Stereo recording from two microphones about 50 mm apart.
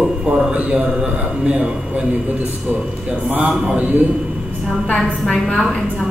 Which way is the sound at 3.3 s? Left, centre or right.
Right.